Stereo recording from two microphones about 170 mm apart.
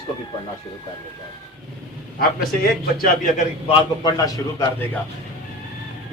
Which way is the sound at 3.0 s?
50° left (ahead or behind).